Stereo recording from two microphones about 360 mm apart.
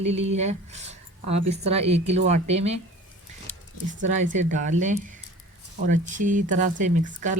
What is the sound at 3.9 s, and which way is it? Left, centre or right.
Speech, centre.